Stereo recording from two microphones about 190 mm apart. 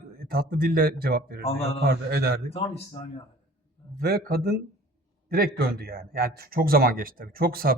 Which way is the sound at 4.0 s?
55° right (ahead or behind).